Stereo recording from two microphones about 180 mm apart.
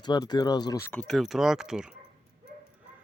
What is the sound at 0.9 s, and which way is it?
Speech, 5° left (ahead or behind).